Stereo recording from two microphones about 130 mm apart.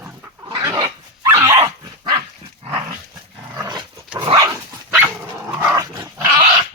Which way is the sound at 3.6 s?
30° right (ahead or behind).